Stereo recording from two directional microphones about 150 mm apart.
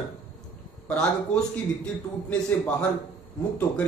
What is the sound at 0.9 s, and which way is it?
A man's voice, 5° left (ahead or behind).